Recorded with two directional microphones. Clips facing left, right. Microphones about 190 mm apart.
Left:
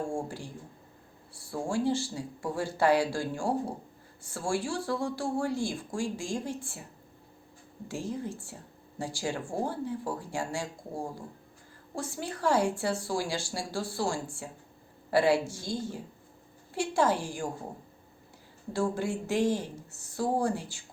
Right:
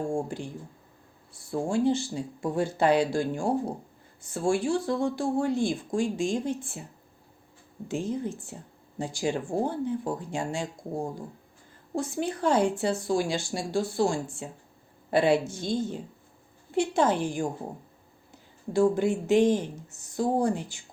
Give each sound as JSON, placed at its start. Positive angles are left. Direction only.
{"t": 0.1, "sound": "speech", "side_deg": -20}
{"t": 7.9, "sound": "speech", "side_deg": -20}
{"t": 18.7, "sound": "speech", "side_deg": -20}